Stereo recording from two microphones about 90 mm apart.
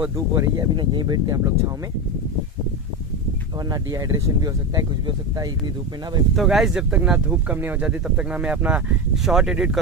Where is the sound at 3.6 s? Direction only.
45° right (ahead or behind).